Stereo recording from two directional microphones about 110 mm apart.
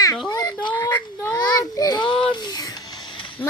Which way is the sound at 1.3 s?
35° left (ahead or behind).